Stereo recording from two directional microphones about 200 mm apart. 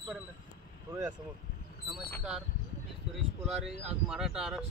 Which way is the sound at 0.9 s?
20° right (ahead or behind).